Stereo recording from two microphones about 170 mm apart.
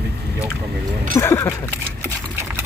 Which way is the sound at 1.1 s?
15° left (ahead or behind).